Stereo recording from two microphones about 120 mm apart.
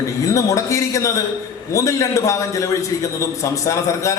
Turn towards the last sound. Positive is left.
turn(degrees=25)  # may be behind; listen again after turning